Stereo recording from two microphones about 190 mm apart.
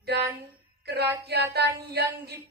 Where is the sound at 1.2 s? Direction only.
60° right (ahead or behind).